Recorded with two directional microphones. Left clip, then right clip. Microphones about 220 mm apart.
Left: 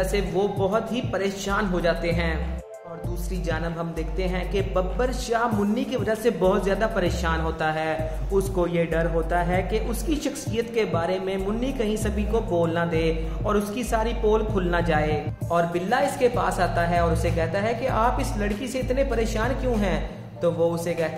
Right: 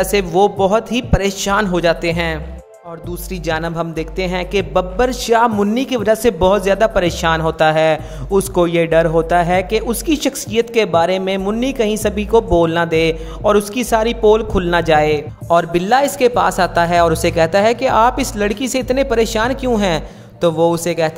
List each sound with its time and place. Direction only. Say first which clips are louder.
0.0 s a man's voice: right 11 dB; 45° right (ahead or behind)
3.4 s a man's voice: right 10 dB; 45° right (ahead or behind)